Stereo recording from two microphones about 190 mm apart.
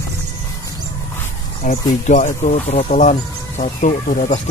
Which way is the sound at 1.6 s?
40° left (ahead or behind).